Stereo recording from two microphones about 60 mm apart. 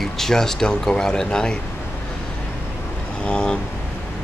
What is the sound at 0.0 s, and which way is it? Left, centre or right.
Speech, centre.